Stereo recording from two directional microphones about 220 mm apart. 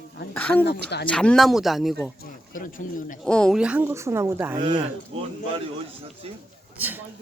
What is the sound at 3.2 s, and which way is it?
Speech, 5° left (ahead or behind).